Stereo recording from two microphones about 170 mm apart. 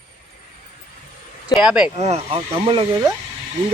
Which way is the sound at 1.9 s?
40° right (ahead or behind).